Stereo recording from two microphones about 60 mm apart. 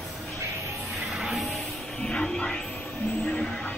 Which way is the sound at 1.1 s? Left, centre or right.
Centre.